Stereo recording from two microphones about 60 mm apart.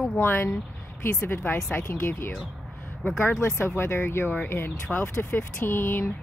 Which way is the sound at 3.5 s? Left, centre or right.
Left.